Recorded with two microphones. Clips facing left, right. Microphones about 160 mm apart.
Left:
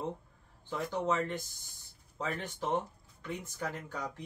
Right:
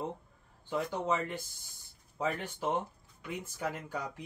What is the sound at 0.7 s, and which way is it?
Speech, 10° right (ahead or behind).